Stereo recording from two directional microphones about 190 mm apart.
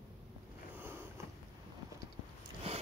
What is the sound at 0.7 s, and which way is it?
Sniff, 10° right (ahead or behind).